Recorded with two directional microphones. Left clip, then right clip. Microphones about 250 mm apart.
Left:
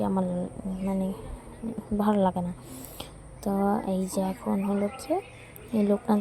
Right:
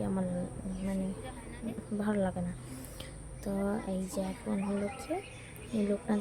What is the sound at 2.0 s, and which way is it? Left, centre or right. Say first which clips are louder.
Speech: left 9 dB; centre.